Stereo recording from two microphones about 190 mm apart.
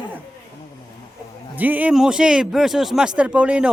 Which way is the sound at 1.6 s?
10° right (ahead or behind).